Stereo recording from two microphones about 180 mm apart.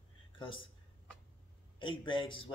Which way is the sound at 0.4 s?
25° left (ahead or behind).